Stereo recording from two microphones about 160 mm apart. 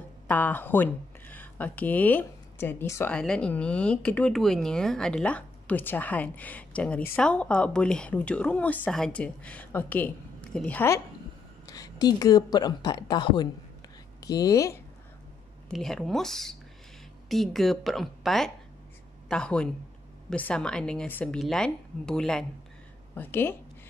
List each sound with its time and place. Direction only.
0.3 s speech: 10° left (ahead or behind)
11.6 s a woman's voice: 25° left (ahead or behind)
15.7 s a woman's voice: 5° left (ahead or behind)